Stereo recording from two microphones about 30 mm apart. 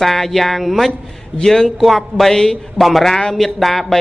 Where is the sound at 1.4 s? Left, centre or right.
Centre.